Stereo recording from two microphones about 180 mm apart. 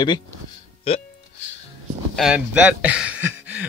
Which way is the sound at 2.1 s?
5° right (ahead or behind).